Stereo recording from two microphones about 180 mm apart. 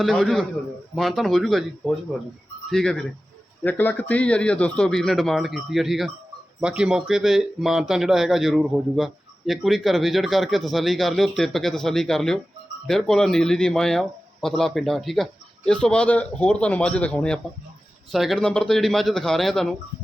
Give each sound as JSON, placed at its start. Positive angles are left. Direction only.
{"t": 0.0, "sound": "speech", "side_deg": 0}